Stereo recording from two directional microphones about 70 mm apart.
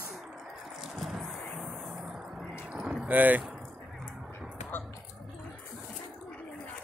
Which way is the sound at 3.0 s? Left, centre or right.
Right.